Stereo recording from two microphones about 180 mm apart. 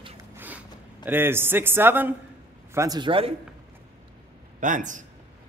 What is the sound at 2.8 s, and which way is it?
Speech, 25° right (ahead or behind).